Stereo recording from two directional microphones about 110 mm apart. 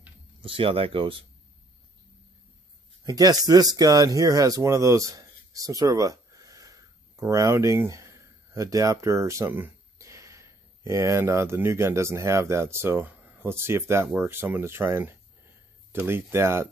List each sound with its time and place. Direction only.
0.4 s speech: 55° right (ahead or behind)
3.0 s speech: 35° right (ahead or behind)